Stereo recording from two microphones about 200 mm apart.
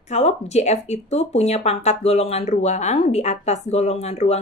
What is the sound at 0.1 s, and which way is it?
Speech, 35° left (ahead or behind).